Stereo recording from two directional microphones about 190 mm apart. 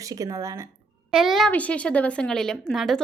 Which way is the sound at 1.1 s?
Centre (ahead or behind).